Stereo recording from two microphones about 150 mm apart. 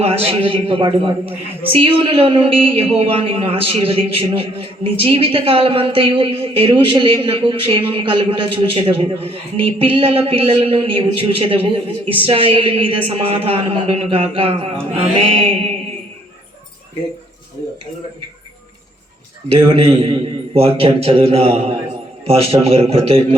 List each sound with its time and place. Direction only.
0.0 s a man's voice: 40° right (ahead or behind)
19.5 s a man's voice: 35° right (ahead or behind)